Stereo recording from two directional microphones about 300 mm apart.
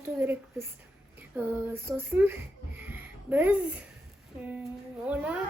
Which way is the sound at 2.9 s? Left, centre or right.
Centre.